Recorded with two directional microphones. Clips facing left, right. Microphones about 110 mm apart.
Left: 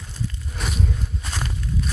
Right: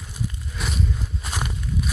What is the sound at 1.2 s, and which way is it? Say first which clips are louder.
Walk: right 1 dB; 15° right (ahead or behind).